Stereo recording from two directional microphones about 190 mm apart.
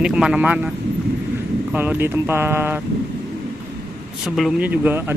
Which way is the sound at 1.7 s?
10° right (ahead or behind).